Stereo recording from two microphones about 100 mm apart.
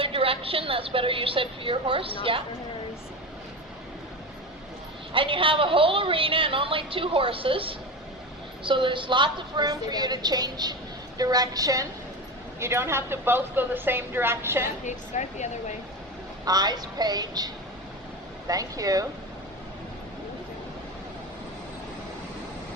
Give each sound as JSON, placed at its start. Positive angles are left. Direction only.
{"t": 0.0, "sound": "a woman's voice", "side_deg": -65}
{"t": 5.1, "sound": "a woman's voice", "side_deg": -60}
{"t": 12.5, "sound": "a woman's voice", "side_deg": -25}
{"t": 16.5, "sound": "a woman's voice", "side_deg": -45}